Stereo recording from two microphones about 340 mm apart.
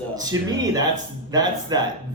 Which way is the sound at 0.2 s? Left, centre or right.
Centre.